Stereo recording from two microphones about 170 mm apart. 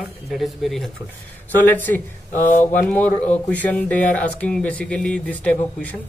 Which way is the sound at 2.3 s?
50° left (ahead or behind).